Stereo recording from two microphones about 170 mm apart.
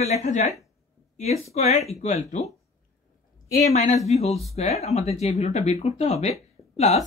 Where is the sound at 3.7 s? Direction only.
45° left (ahead or behind).